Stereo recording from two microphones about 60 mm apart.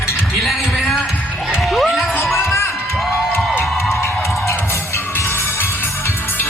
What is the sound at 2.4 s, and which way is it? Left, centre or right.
Crowd, left.